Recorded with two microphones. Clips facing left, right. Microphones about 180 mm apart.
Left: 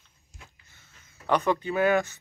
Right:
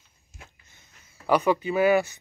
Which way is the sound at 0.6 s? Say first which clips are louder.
Right 1 dB; 20° right (ahead or behind).